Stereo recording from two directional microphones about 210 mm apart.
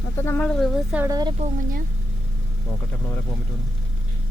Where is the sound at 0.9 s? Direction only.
15° right (ahead or behind).